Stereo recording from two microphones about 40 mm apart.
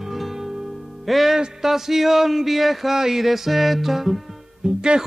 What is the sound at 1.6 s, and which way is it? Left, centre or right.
Speech, centre.